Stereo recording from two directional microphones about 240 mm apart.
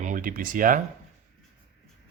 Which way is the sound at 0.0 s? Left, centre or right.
Right.